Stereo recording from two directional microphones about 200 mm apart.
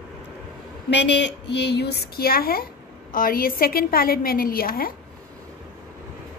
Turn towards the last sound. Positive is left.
turn(degrees=45)  # may be behind; listen again after turning